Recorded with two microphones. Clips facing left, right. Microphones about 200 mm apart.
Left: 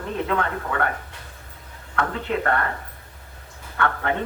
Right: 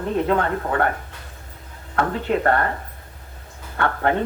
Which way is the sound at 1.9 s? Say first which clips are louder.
Right 4 dB; 35° right (ahead or behind).